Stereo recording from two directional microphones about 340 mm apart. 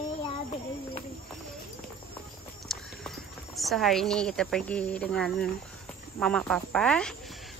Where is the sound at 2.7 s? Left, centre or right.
Centre.